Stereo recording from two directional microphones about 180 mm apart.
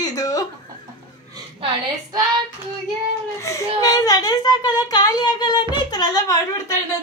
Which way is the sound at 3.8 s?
20° left (ahead or behind).